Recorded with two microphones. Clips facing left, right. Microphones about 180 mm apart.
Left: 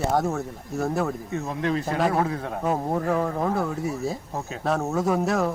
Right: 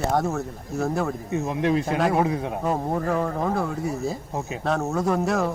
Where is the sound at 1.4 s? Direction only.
15° right (ahead or behind).